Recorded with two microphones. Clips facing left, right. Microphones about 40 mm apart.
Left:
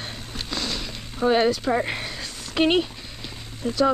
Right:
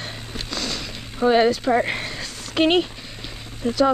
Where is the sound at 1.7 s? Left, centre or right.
Centre.